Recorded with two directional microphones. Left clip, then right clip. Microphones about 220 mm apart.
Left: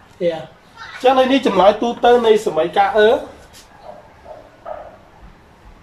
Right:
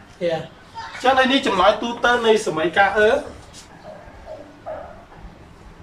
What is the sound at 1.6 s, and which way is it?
Speech, 15° left (ahead or behind).